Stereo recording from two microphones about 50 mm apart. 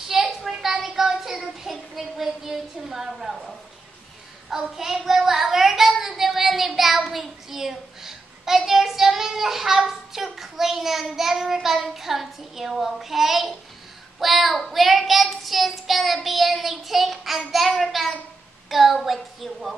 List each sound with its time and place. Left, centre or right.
0.1 s child singing: centre
4.7 s speech: centre
14.2 s child singing: centre